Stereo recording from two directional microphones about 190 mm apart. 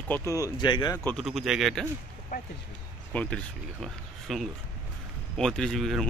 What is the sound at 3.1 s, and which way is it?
Speech, 5° left (ahead or behind).